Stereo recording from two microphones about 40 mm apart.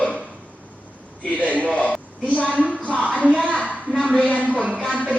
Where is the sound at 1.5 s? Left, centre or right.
Left.